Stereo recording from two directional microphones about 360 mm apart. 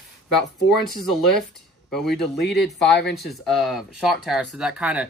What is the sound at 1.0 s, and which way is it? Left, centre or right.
Speech, centre.